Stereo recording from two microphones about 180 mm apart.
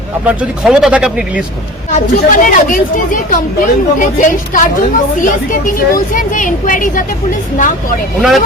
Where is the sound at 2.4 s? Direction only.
50° left (ahead or behind).